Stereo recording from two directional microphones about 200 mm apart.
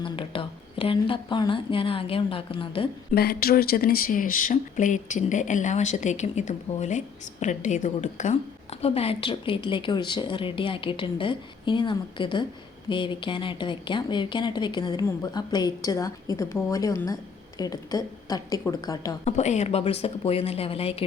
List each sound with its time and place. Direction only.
0.0 s a woman's voice: 25° left (ahead or behind)
3.2 s a woman's voice: 50° left (ahead or behind); by 19.1 s 20° left (ahead or behind)
19.2 s speech: 35° left (ahead or behind)